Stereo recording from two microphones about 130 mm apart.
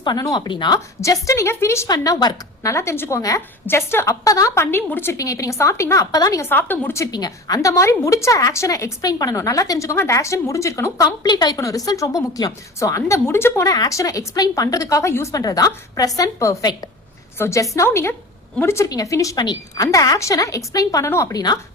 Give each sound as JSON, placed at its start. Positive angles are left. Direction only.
{"t": 0.0, "sound": "speech", "side_deg": 30}
{"t": 1.0, "sound": "a woman's voice", "side_deg": 25}
{"t": 6.4, "sound": "a woman's voice", "side_deg": 15}